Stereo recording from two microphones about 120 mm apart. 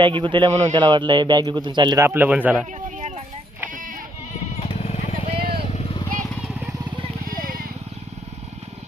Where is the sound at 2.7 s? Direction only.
90° right.